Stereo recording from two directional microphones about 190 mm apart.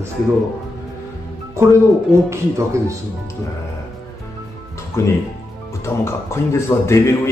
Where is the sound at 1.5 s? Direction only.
15° right (ahead or behind).